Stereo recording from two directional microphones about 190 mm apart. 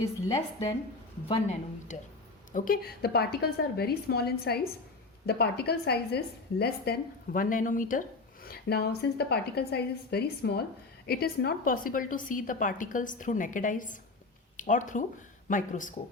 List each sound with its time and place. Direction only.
1.3 s a woman's voice: 35° left (ahead or behind)
8.4 s a woman's voice: 55° left (ahead or behind)